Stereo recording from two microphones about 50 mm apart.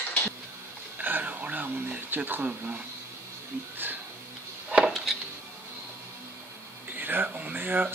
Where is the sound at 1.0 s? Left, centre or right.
Right.